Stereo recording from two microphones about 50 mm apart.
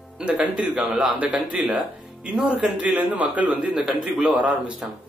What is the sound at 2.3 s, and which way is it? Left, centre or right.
A man's voice, centre.